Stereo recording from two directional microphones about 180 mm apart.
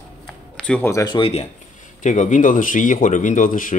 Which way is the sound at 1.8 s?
45° left (ahead or behind).